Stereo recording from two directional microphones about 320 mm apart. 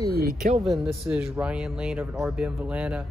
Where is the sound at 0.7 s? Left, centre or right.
Centre.